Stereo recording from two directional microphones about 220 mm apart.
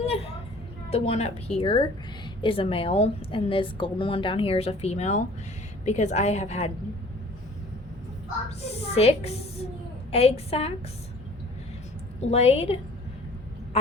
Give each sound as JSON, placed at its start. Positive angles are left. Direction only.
{"t": 0.9, "sound": "a woman's voice", "side_deg": 25}
{"t": 8.4, "sound": "a woman's voice", "side_deg": 30}
{"t": 12.2, "sound": "a woman's voice", "side_deg": 30}